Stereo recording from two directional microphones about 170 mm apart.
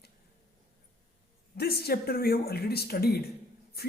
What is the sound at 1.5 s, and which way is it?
Speech, 65° left (ahead or behind).